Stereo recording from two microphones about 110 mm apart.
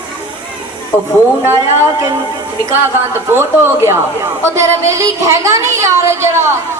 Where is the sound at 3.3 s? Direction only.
25° right (ahead or behind).